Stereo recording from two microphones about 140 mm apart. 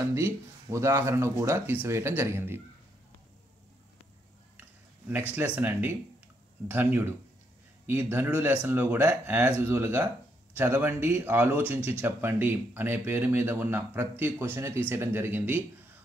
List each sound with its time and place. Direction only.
0.1 s speech: 20° right (ahead or behind)
5.6 s speech: 15° right (ahead or behind)